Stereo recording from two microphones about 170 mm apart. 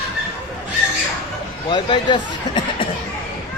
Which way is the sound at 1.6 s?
30° left (ahead or behind).